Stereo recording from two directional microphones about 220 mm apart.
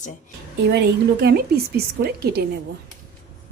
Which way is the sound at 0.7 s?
45° right (ahead or behind).